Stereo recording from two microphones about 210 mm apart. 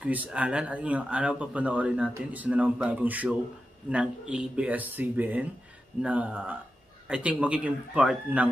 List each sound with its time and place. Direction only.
0.0 s speech: 5° right (ahead or behind)